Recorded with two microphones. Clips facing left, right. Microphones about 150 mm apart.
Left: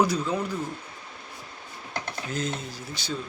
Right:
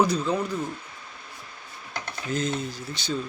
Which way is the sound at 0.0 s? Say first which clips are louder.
Right 1 dB; 10° left (ahead or behind).